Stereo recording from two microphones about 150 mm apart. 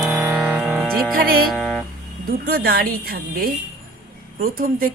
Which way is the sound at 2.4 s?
85° right.